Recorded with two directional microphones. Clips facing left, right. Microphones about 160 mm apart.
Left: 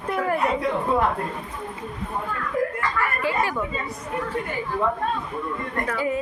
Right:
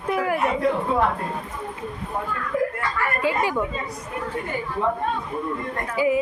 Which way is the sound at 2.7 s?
20° right (ahead or behind).